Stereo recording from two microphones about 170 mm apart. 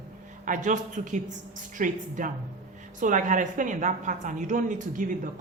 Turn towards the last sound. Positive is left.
turn(degrees=-50)  # may be behind; listen again after turning